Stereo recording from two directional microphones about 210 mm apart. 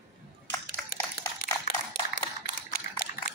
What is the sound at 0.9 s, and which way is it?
Dog, 45° left (ahead or behind).